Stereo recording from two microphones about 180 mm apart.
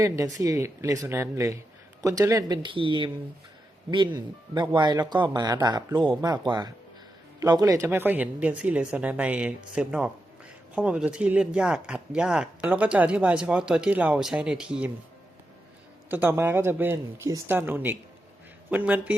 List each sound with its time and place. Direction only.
0.0 s speech: 20° right (ahead or behind)
16.0 s speech: 10° right (ahead or behind)